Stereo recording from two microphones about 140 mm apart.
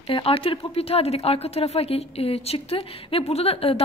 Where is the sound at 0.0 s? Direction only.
40° left (ahead or behind).